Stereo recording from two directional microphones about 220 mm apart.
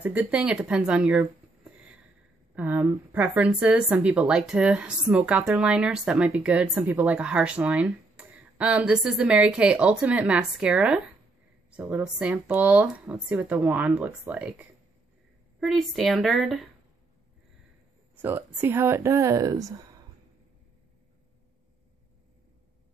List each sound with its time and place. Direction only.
0.0 s a woman's voice: 10° right (ahead or behind)
18.2 s speech: 10° right (ahead or behind)